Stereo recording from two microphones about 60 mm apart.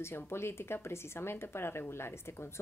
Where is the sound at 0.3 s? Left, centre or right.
Left.